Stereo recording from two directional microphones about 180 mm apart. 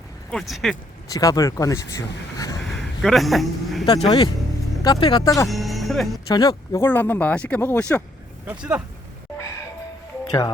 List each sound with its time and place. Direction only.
0.3 s speech: centre (ahead or behind)
1.1 s speech: 20° left (ahead or behind)
3.0 s speech: centre (ahead or behind)
3.8 s speech: 30° left (ahead or behind)
5.5 s music: centre (ahead or behind)
6.2 s speech: 20° left (ahead or behind)
8.4 s speech: 5° right (ahead or behind)